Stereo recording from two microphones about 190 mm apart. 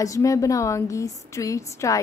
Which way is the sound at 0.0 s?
15° left (ahead or behind).